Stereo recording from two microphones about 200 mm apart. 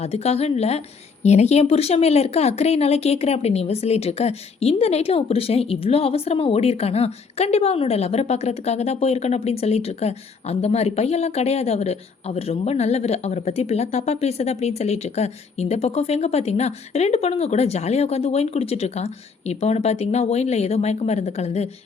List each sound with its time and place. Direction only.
0.0 s speech: 30° left (ahead or behind)